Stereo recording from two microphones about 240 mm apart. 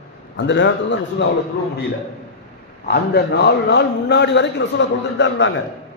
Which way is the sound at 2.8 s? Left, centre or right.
Left.